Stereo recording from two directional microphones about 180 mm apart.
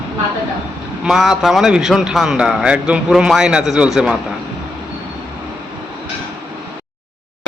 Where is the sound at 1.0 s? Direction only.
Centre (ahead or behind).